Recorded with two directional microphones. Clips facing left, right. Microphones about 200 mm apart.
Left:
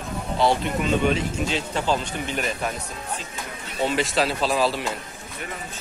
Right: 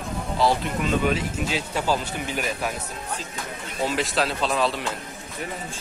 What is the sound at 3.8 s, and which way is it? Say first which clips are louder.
Speech: left 2 dB; centre (ahead or behind).